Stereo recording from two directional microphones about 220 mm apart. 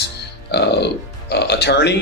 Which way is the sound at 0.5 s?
50° left (ahead or behind).